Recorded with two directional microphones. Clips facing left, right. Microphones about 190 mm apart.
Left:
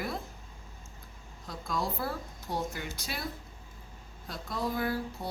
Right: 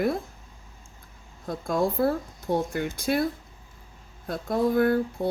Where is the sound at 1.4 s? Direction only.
55° right (ahead or behind).